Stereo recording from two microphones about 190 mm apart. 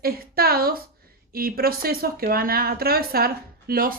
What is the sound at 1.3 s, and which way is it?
Speech, 50° right (ahead or behind).